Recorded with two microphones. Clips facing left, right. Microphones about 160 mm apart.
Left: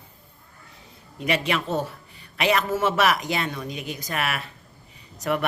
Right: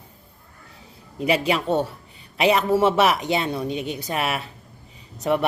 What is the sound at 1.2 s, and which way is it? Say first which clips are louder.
A woman's voice: right 4 dB; 30° right (ahead or behind).